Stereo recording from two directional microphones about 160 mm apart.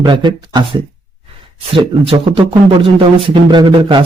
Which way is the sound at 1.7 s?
35° right (ahead or behind).